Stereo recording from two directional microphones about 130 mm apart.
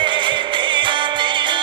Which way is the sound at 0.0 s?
40° right (ahead or behind).